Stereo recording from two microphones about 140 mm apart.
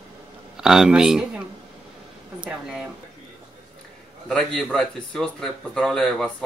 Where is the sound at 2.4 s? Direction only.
5° right (ahead or behind).